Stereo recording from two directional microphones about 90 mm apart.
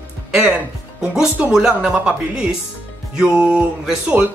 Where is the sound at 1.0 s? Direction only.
5° right (ahead or behind).